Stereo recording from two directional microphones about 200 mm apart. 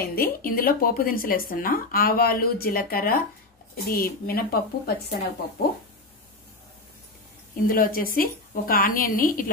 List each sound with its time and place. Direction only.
0.0 s speech: 50° left (ahead or behind)
7.6 s speech: 45° left (ahead or behind)